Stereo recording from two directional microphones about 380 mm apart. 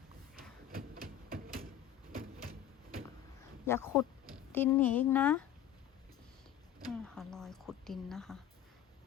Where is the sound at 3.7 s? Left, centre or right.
Centre.